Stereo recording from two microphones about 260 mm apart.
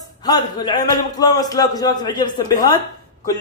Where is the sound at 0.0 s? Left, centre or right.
Centre.